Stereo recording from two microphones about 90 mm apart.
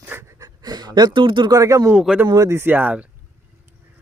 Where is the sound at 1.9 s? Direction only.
15° right (ahead or behind).